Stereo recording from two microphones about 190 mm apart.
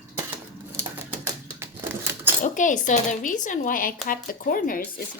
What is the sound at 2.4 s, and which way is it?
Speech, 40° left (ahead or behind).